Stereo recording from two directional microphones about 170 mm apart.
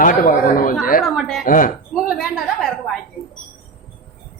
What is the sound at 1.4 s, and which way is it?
Speech, 55° left (ahead or behind).